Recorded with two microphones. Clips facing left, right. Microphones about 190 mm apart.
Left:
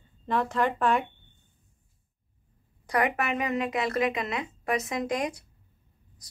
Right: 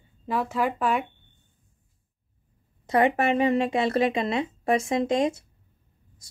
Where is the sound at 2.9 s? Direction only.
25° right (ahead or behind).